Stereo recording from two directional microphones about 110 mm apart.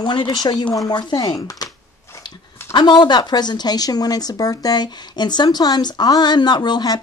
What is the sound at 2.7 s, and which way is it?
A woman's voice, 45° left (ahead or behind).